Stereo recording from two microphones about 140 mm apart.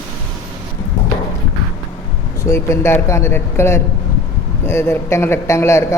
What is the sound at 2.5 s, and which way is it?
A man's voice, 20° left (ahead or behind).